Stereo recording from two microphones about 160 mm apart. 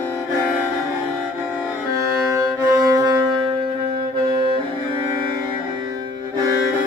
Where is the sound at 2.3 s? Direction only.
20° right (ahead or behind).